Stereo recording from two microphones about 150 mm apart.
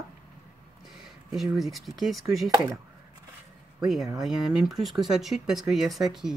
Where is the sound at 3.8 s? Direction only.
Centre (ahead or behind).